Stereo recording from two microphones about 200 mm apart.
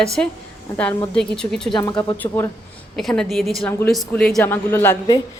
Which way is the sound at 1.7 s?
20° left (ahead or behind).